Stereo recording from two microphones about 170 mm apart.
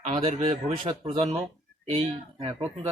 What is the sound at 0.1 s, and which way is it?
Speech, 35° right (ahead or behind).